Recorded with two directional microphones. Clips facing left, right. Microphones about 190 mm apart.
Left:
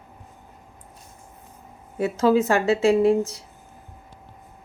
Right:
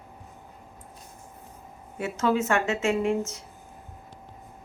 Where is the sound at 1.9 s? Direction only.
35° left (ahead or behind).